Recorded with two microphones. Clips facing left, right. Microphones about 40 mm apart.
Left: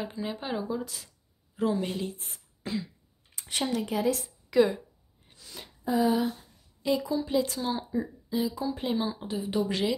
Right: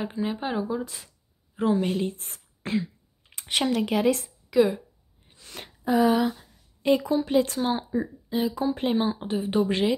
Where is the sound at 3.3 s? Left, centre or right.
Right.